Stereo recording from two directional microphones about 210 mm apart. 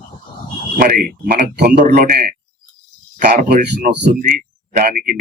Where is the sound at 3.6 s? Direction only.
50° right (ahead or behind).